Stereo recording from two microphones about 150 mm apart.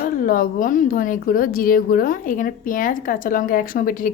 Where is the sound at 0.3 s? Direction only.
65° left (ahead or behind).